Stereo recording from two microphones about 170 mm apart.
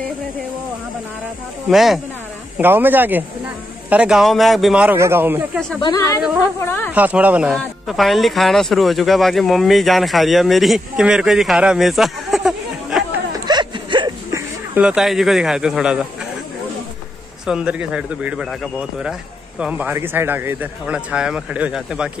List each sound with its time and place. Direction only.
1.7 s speech: centre (ahead or behind)
2.5 s a man's voice: 10° right (ahead or behind)
5.8 s speech: 20° left (ahead or behind)
6.9 s a man's voice: 10° right (ahead or behind)
13.5 s a sound: 25° right (ahead or behind)
14.3 s a man's voice: 10° right (ahead or behind)
17.5 s a man's voice: 5° right (ahead or behind)